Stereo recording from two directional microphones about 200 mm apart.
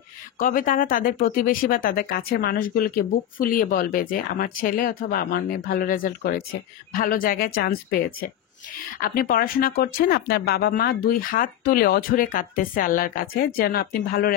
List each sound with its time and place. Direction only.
0.4 s speech: 40° left (ahead or behind)